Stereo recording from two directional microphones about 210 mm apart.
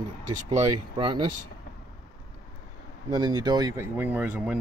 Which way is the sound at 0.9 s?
20° right (ahead or behind).